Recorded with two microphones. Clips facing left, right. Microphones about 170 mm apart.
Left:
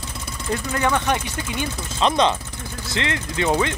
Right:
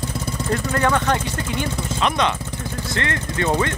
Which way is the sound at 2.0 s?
30° left (ahead or behind).